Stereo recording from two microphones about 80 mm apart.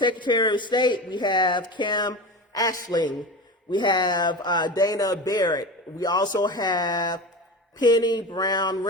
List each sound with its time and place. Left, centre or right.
0.0 s speech: left